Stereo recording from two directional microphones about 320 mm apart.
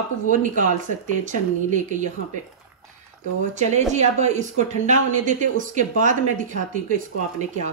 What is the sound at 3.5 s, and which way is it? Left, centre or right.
A woman's voice, right.